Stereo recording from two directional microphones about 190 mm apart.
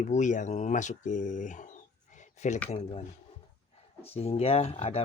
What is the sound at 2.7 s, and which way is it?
Speech, 35° left (ahead or behind).